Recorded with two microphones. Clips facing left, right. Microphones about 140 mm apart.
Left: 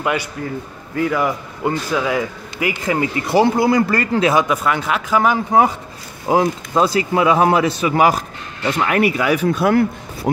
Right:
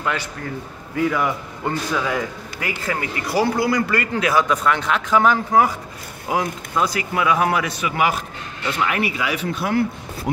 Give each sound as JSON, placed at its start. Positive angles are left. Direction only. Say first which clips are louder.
{"t": 0.0, "sound": "a man's voice", "louder": "left 4 dB", "side_deg": 15}
{"t": 0.9, "sound": "speech", "louder": "left 2 dB", "side_deg": 0}
{"t": 4.5, "sound": "speech", "louder": "left 1 dB", "side_deg": 5}
{"t": 5.5, "sound": "speech", "louder": "left 2 dB", "side_deg": 25}
{"t": 6.2, "sound": "speech", "louder": "left 7 dB", "side_deg": 35}